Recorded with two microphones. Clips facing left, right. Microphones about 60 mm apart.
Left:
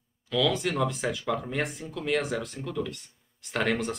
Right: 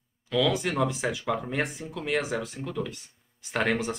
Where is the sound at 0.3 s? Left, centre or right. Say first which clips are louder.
Right 1 dB; centre.